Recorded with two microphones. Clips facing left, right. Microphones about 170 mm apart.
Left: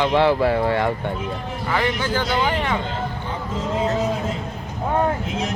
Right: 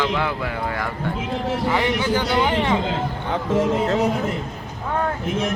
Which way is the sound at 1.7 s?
20° right (ahead or behind).